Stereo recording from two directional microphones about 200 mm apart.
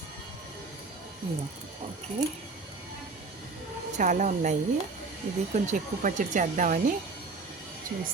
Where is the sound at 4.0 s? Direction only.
40° right (ahead or behind).